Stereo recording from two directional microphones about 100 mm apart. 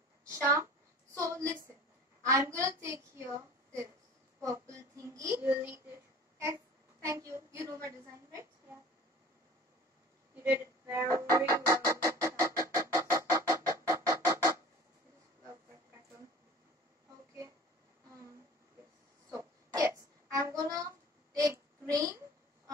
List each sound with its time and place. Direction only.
0.3 s a woman's voice: 25° right (ahead or behind)
1.1 s a sound: 30° right (ahead or behind)
2.2 s a woman's voice: 30° right (ahead or behind)
4.4 s speech: 30° right (ahead or behind)
10.3 s music: 20° right (ahead or behind)
19.8 s child singing: 30° right (ahead or behind)
21.3 s a sound: 35° right (ahead or behind)